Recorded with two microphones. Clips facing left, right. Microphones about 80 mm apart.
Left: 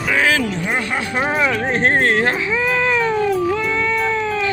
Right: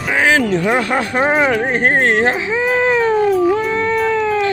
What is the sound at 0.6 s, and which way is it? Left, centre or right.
Speech, right.